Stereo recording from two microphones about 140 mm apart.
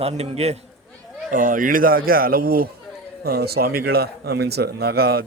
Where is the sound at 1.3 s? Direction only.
75° right (ahead or behind).